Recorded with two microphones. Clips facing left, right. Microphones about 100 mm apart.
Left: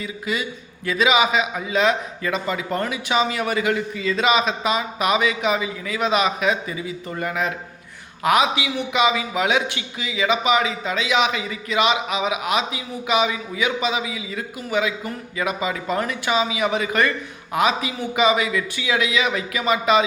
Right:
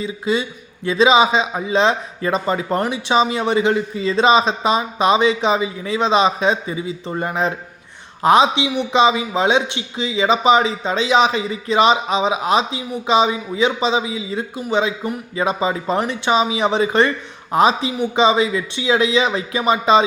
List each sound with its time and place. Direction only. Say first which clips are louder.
0.0 s a man's voice: right 6 dB; 25° right (ahead or behind)